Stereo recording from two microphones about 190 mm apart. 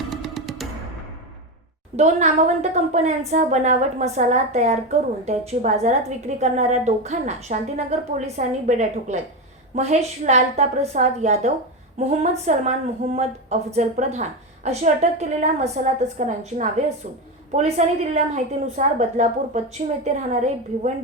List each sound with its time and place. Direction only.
0.1 s music: centre (ahead or behind)
2.0 s a woman's voice: 35° right (ahead or behind)
13.7 s a woman's voice: 35° right (ahead or behind)